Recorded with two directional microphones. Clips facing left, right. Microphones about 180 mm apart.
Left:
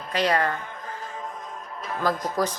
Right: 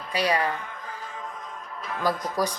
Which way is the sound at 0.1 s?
10° right (ahead or behind).